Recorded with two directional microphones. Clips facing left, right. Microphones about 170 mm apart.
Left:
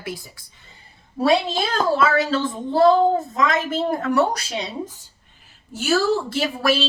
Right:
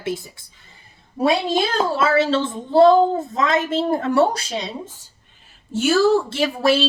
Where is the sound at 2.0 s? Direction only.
25° right (ahead or behind).